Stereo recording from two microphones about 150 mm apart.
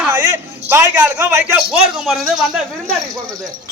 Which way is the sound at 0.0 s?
15° right (ahead or behind).